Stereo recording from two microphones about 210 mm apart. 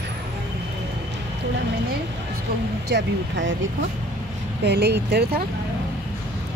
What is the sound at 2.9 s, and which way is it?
Speech, 60° right (ahead or behind).